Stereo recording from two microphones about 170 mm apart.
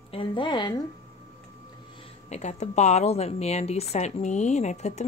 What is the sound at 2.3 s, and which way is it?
A woman's voice, 40° left (ahead or behind).